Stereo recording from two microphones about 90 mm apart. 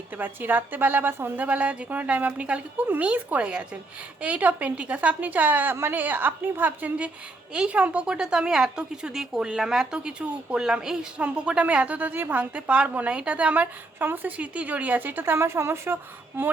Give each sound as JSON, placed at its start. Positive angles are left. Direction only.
{"t": 0.2, "sound": "a woman's voice", "side_deg": -20}